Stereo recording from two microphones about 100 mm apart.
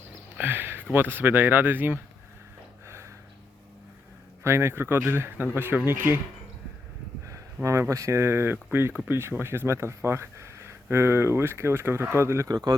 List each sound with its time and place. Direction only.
0.3 s speech: 20° right (ahead or behind)
2.8 s a sound: 30° right (ahead or behind)
4.4 s speech: 25° right (ahead or behind)
7.3 s speech: 30° right (ahead or behind)
12.5 s speech: 40° right (ahead or behind)